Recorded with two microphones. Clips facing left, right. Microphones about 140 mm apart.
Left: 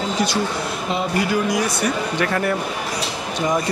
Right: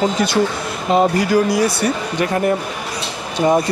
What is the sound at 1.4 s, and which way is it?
Speech, 30° right (ahead or behind).